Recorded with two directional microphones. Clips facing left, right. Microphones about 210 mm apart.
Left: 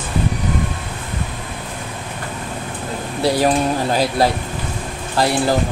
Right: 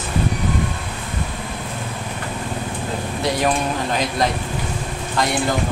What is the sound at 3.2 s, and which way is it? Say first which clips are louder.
Speech: left 5 dB; 35° left (ahead or behind).